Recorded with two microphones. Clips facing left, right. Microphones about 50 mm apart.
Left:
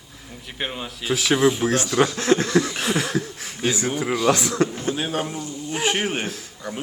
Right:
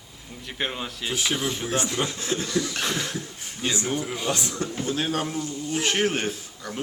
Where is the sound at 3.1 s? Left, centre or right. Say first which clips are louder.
Left 8 dB; left.